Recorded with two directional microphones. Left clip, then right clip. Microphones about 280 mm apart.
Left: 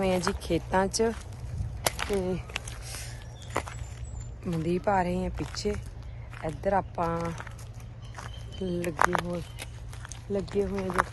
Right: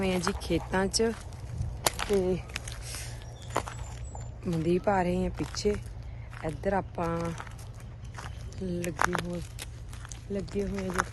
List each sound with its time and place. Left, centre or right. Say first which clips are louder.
0.0 s speech: left 3 dB; centre
1.8 s whip: right 2 dB; centre
2.5 s walk: left 2 dB; centre
4.4 s speech: right 1 dB; centre
9.0 s a sound: left 4 dB; centre
10.1 s a sound: left 4 dB; left
10.8 s speech: left 2 dB; centre